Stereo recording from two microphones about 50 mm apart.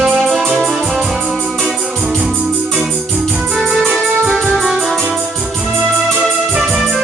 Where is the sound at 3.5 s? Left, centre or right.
Centre.